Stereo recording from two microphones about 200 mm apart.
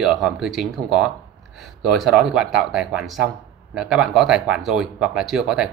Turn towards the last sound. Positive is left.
turn(degrees=0)  # may be behind; listen again after turning